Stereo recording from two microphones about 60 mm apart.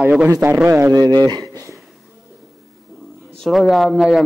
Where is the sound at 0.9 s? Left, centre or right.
Right.